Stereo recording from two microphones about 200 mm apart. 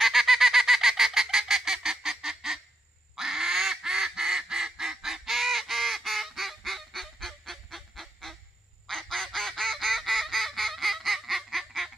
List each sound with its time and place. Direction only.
0.0 s fowl: centre (ahead or behind)
3.2 s duck: centre (ahead or behind)